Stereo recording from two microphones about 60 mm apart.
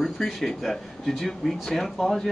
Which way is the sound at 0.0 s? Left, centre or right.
Centre.